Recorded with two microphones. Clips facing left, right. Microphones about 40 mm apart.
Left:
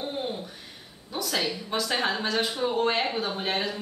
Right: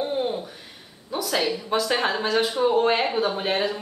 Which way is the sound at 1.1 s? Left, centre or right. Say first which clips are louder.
Right 4 dB; centre.